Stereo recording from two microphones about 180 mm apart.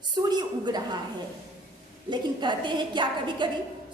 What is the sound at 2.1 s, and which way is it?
A woman's voice, 25° right (ahead or behind).